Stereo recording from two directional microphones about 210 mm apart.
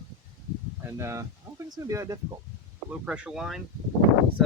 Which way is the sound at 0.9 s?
15° right (ahead or behind).